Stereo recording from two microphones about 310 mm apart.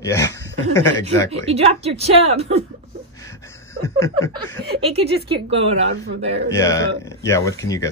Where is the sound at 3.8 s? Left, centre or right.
Centre.